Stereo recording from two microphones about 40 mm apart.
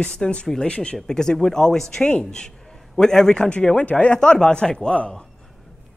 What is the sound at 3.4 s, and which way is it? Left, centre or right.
A man's voice, left.